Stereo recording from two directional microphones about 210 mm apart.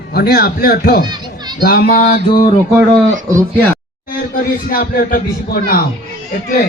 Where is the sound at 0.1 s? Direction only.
50° left (ahead or behind).